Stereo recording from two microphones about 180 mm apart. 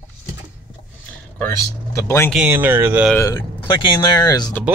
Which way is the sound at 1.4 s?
15° left (ahead or behind).